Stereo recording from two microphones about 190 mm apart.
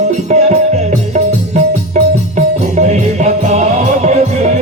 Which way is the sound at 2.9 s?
35° right (ahead or behind).